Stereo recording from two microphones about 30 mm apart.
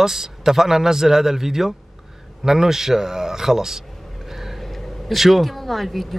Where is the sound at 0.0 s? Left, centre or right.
Centre.